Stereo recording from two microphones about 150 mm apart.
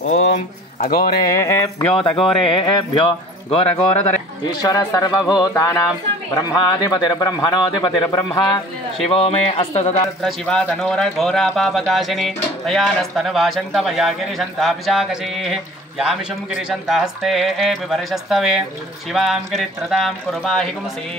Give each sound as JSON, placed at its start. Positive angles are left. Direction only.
{"t": 0.8, "sound": "speech", "side_deg": 75}
{"t": 1.2, "sound": "speech", "side_deg": 20}
{"t": 2.0, "sound": "speech", "side_deg": 5}
{"t": 2.4, "sound": "speech", "side_deg": 30}
{"t": 9.1, "sound": "speech", "side_deg": 40}
{"t": 10.2, "sound": "speech", "side_deg": 5}